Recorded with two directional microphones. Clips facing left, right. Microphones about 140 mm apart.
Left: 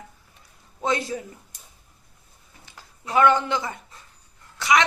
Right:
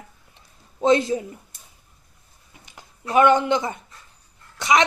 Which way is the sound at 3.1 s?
20° right (ahead or behind).